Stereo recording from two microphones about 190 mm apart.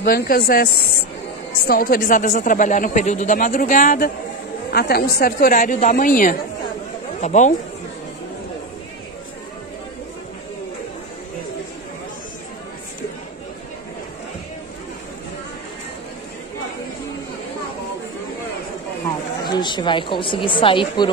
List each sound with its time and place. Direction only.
0.0 s speech: 50° left (ahead or behind)
1.7 s speech: 50° left (ahead or behind)
19.5 s speech: 25° left (ahead or behind)